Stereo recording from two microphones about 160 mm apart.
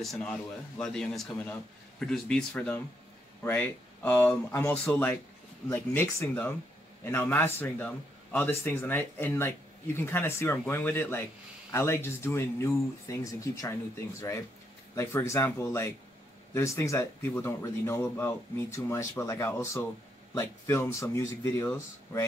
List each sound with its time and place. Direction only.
0.0 s a man's voice: 5° left (ahead or behind)
15.0 s speech: 15° left (ahead or behind)